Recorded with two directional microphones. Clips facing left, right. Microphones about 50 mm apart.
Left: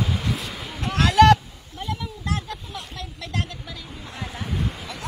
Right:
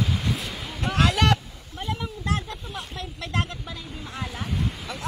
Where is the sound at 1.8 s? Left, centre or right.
Right.